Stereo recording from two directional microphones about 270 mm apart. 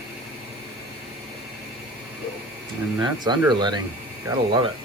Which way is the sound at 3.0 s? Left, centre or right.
Centre.